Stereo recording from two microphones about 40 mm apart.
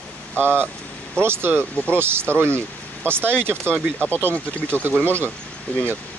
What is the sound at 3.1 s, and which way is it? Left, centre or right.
Speech, left.